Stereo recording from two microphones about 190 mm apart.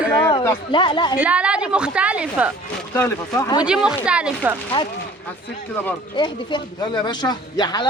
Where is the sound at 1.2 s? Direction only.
5° right (ahead or behind).